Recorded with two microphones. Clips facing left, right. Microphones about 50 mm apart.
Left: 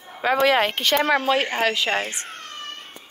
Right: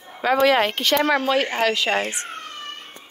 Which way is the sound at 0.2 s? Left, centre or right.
Left.